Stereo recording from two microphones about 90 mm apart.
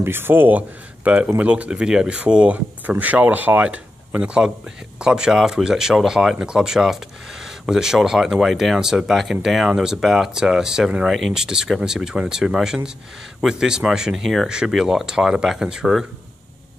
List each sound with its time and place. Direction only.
0.0 s speech: 25° right (ahead or behind); by 16.1 s 5° right (ahead or behind)